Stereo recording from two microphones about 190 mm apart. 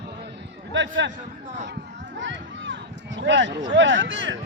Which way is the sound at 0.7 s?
75° right (ahead or behind).